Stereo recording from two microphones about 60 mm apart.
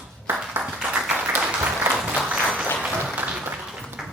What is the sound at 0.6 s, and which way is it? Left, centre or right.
Clapping, centre.